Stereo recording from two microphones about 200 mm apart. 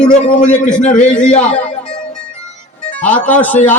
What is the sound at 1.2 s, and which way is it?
Speech, 35° left (ahead or behind).